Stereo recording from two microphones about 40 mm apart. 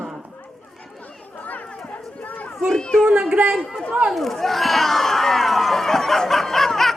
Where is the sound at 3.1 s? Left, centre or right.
Right.